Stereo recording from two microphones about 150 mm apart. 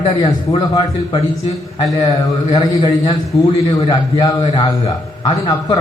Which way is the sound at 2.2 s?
25° left (ahead or behind).